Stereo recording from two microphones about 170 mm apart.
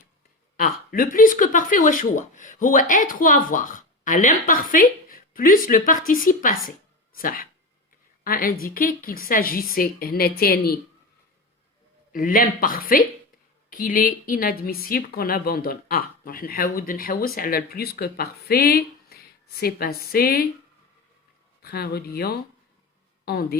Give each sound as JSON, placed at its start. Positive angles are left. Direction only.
{"t": 0.5, "sound": "speech", "side_deg": 55}
{"t": 6.7, "sound": "a sound", "side_deg": 55}
{"t": 8.2, "sound": "a woman's voice", "side_deg": 60}
{"t": 12.1, "sound": "a woman's voice", "side_deg": 55}
{"t": 21.6, "sound": "speech", "side_deg": 65}